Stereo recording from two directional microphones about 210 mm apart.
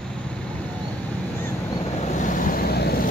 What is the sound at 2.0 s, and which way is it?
Vehicle, 35° left (ahead or behind).